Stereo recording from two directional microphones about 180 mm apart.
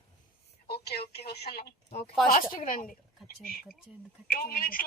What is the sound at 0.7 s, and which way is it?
Speech, 65° left (ahead or behind).